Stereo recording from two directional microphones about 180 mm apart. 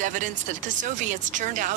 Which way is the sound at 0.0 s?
45° right (ahead or behind).